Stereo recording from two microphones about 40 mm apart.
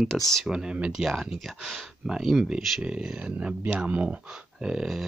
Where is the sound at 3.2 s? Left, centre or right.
Right.